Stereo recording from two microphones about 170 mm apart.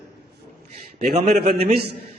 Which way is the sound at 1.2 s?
70° right (ahead or behind).